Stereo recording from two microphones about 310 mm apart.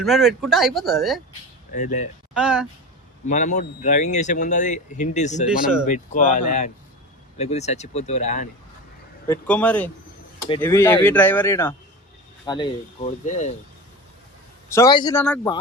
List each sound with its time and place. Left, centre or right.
0.0 s speech: centre
1.7 s speech: left
2.3 s speech: centre
3.2 s speech: left
5.5 s speech: centre
5.8 s speech: left
9.2 s speech: centre; by 13.5 s left
14.7 s speech: centre